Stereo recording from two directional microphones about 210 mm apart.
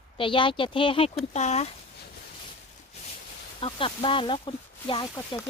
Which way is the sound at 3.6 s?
25° left (ahead or behind).